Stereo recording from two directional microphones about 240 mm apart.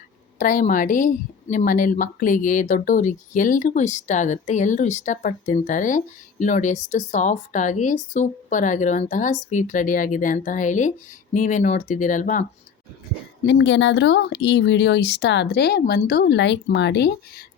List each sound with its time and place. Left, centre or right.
0.3 s a woman's voice: left
13.4 s speech: left